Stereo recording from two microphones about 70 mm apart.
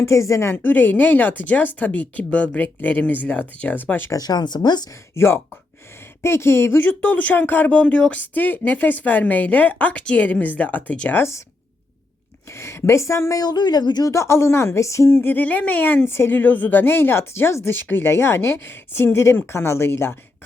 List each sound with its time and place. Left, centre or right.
0.0 s speech: left
0.5 s speech: left
4.1 s speech: left
5.1 s speech: left; by 11.1 s centre
11.1 s speech: left
12.5 s speech: left
13.4 s speech: left
14.1 s speech: left
15.2 s speech: left